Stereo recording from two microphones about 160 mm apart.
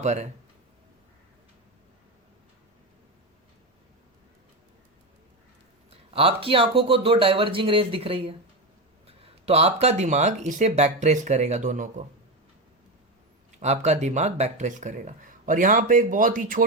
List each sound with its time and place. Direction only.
0.0 s speech: 45° right (ahead or behind)
5.9 s speech: 35° right (ahead or behind); by 12.0 s 50° right (ahead or behind)
13.6 s speech: 45° right (ahead or behind)